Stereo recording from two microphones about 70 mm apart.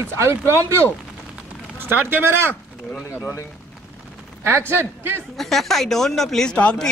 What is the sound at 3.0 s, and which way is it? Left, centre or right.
Speech, left.